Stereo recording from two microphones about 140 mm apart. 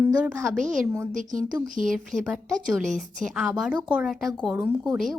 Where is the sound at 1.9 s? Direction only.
Centre (ahead or behind).